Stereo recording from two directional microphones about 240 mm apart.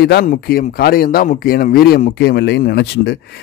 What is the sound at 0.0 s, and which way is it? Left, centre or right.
Speech, left.